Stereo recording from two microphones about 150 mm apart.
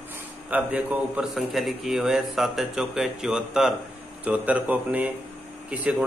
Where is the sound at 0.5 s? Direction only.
10° right (ahead or behind).